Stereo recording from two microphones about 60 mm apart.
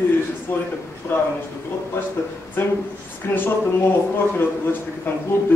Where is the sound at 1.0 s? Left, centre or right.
Left.